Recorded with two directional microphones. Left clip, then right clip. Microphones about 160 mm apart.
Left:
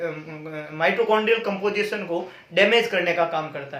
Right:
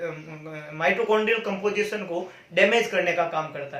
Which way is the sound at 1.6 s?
25° left (ahead or behind).